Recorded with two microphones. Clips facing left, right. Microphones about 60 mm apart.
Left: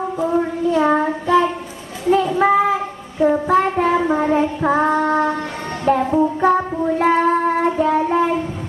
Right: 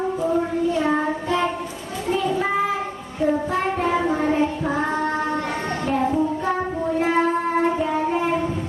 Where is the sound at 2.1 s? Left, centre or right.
Left.